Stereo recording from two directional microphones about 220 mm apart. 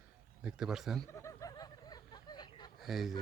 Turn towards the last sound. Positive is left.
turn(degrees=0)  # may be behind; listen again after turning